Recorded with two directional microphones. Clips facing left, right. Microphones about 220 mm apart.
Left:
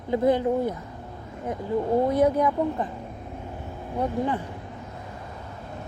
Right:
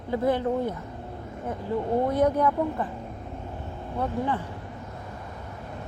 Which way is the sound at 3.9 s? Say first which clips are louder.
Left 2 dB; 15° left (ahead or behind).